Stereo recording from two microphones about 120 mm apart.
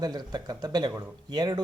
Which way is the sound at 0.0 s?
35° right (ahead or behind).